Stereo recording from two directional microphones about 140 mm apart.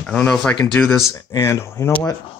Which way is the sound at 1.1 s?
20° left (ahead or behind).